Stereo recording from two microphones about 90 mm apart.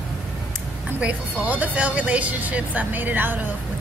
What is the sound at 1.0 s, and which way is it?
Speech, 15° right (ahead or behind).